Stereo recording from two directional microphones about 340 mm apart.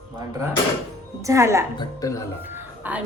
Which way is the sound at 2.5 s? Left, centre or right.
Centre.